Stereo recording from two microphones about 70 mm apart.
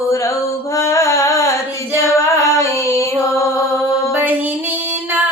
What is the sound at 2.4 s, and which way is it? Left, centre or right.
Female singing, left.